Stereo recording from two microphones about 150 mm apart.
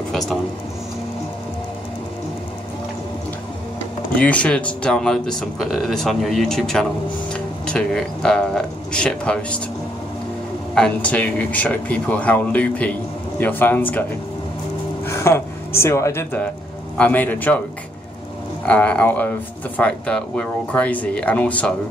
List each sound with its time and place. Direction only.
4.2 s speech: 10° left (ahead or behind)
10.7 s speech: 5° left (ahead or behind)
15.0 s speech: 15° left (ahead or behind)
18.7 s speech: 10° left (ahead or behind)